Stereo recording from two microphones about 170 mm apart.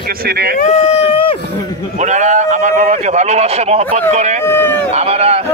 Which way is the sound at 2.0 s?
45° right (ahead or behind).